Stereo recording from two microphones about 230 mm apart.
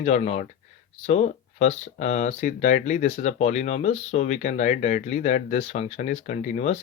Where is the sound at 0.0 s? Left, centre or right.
Left.